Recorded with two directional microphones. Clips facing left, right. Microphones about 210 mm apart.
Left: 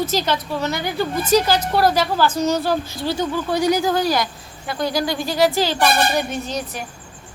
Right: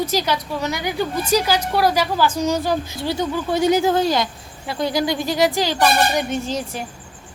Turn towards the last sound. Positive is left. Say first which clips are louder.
# right 2 dB
turn(degrees=-25)  # may be behind; listen again after turning